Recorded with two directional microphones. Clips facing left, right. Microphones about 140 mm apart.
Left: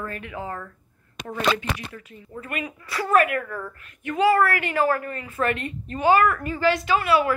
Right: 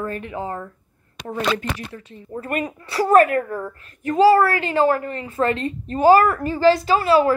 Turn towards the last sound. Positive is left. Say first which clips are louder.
# right 4 dB
turn(degrees=-35)  # may be behind; listen again after turning